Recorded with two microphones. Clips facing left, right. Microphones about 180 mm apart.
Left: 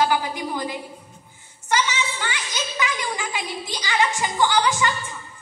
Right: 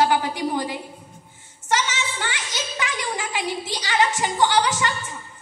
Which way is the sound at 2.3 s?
70° right (ahead or behind).